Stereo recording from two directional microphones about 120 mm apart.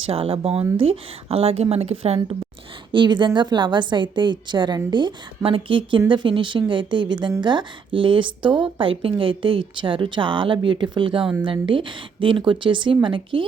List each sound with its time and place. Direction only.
0.1 s a woman's voice: 55° right (ahead or behind)
2.9 s a woman's voice: 40° right (ahead or behind)